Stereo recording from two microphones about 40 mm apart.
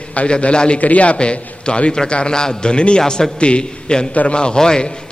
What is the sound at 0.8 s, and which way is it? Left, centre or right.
Speech, left.